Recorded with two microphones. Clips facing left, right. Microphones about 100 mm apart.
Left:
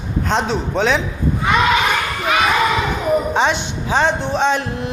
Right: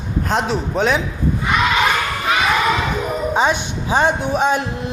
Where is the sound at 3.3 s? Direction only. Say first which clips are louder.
Even; 10° right (ahead or behind).